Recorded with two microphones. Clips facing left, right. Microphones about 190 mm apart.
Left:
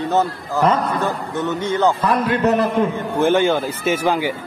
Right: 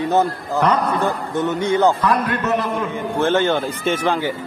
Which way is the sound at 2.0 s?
25° left (ahead or behind).